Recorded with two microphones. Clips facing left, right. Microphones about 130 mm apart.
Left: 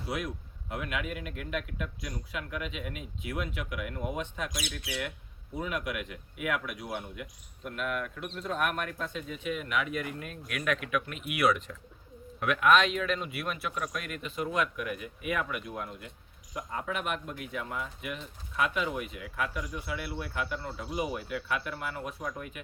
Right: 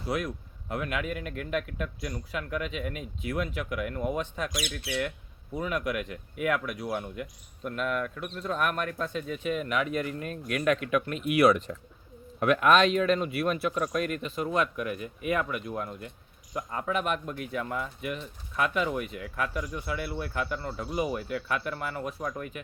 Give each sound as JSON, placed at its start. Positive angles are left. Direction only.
{"t": 0.7, "sound": "speech", "side_deg": -45}
{"t": 4.5, "sound": "speech", "side_deg": -50}
{"t": 5.6, "sound": "speech", "side_deg": -40}